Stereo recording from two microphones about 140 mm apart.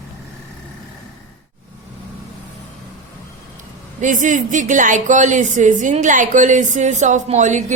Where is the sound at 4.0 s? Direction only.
65° right (ahead or behind).